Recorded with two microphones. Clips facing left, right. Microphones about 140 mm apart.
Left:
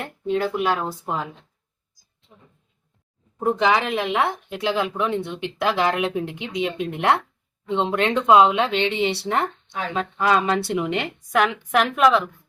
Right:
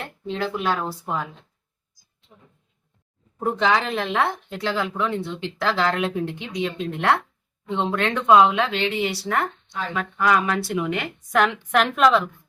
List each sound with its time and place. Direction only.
0.4 s speech: 10° left (ahead or behind)
3.4 s speech: 10° left (ahead or behind)
11.3 s a woman's voice: 5° left (ahead or behind)